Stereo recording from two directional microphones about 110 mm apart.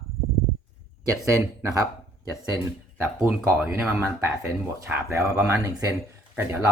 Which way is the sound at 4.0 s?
25° right (ahead or behind).